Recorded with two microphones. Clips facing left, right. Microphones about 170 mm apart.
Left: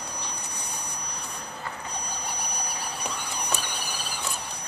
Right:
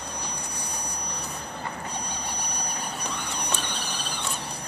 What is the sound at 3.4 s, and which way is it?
Printer, 10° left (ahead or behind).